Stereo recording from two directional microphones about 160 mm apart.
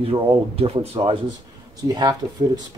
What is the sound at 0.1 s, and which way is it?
A man's voice, 35° right (ahead or behind).